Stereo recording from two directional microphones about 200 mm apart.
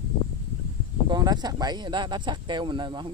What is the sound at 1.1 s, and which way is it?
Speech, 20° right (ahead or behind).